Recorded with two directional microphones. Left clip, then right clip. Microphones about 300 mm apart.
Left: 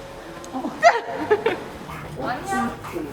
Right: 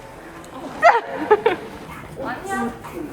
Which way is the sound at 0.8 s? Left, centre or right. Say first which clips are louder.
Right 2 dB; centre.